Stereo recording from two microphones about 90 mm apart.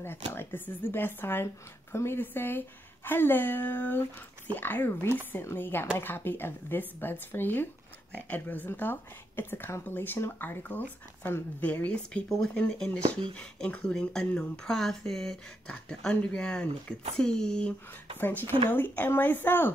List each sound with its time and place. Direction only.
0.3 s speech: 25° left (ahead or behind)
18.2 s speech: 25° left (ahead or behind)